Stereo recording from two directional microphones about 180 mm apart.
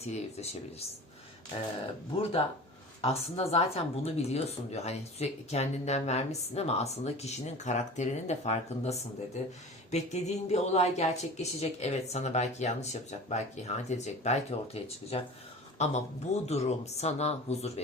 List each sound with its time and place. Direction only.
0.0 s speech: 35° left (ahead or behind)
3.0 s speech: 35° left (ahead or behind)